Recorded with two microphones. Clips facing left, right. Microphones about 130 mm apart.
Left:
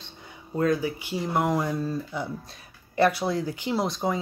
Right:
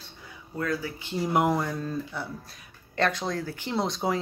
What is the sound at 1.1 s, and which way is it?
Speech, 5° right (ahead or behind).